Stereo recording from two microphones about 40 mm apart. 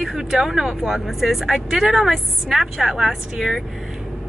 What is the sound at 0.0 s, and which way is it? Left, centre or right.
Speech, centre.